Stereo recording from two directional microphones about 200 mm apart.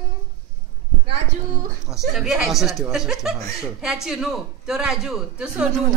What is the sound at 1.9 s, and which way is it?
A man's voice, centre (ahead or behind).